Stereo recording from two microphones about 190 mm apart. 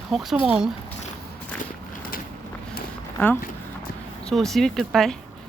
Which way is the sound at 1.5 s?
45° left (ahead or behind).